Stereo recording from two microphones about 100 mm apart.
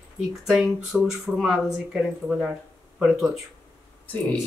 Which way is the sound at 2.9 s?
5° right (ahead or behind).